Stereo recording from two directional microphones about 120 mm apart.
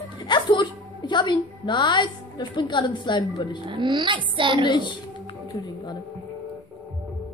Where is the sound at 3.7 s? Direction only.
40° right (ahead or behind).